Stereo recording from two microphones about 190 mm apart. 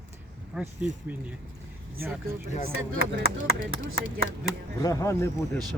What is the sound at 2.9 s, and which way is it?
Speech, 90° right.